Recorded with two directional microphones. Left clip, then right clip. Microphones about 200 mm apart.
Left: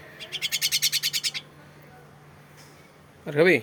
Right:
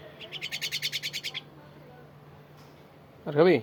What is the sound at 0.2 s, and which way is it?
Bird, 55° right (ahead or behind).